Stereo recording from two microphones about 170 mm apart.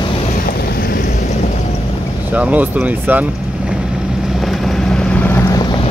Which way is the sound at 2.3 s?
10° right (ahead or behind).